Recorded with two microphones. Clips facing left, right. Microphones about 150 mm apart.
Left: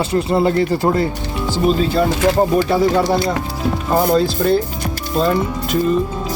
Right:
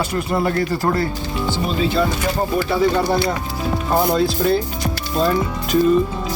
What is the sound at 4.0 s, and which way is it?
Speech, centre (ahead or behind).